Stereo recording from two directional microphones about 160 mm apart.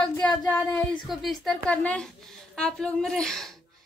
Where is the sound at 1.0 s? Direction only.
Centre (ahead or behind).